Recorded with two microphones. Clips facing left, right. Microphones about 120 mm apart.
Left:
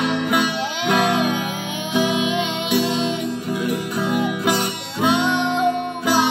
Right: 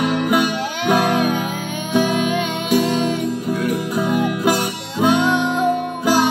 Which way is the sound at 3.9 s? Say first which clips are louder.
Right 2 dB; 10° right (ahead or behind).